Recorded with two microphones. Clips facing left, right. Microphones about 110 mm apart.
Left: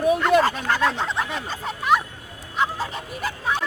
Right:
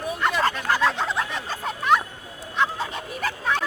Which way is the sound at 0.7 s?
5° right (ahead or behind).